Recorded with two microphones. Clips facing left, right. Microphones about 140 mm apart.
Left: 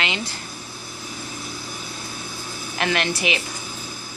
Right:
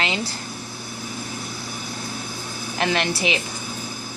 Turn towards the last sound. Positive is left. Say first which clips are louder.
# right 1 dB
turn(degrees=-30)  # may be behind; listen again after turning